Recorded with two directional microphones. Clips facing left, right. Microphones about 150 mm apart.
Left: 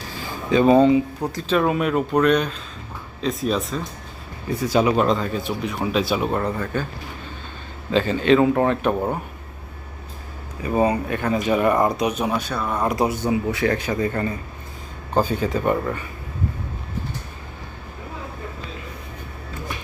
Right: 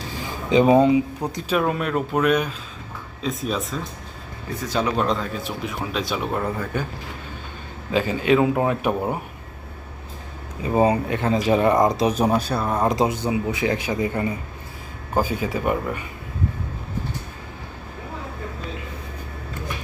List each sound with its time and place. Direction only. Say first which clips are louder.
0.5 s speech: left 1 dB; 10° right (ahead or behind)
1.6 s speech: left 3 dB; 5° left (ahead or behind)
4.6 s speech: left 4 dB; 10° left (ahead or behind); by 6.8 s 5° right (ahead or behind)
7.9 s speech: left 2 dB; 10° right (ahead or behind)
10.6 s speech: right 1 dB; 25° right (ahead or behind)
12.0 s speech: right 3 dB; 35° right (ahead or behind); by 16.0 s 15° right (ahead or behind)